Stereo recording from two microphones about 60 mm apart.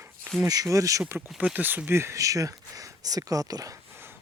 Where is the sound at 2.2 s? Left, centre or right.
Right.